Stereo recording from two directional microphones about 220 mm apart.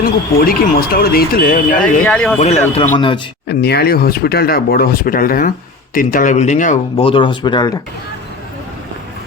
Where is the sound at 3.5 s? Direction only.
45° left (ahead or behind); by 7.7 s 20° left (ahead or behind).